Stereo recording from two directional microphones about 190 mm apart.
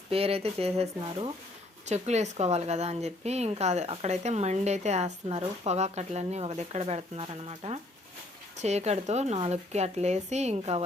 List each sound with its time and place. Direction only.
0.1 s a woman's voice: 30° right (ahead or behind)